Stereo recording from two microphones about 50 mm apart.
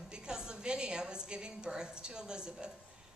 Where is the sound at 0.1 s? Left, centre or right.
Centre.